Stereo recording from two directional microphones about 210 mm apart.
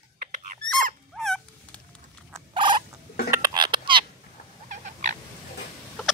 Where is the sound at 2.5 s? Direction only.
20° right (ahead or behind).